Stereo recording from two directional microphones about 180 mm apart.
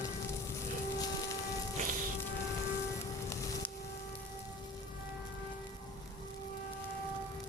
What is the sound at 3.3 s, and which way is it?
Music, 15° left (ahead or behind).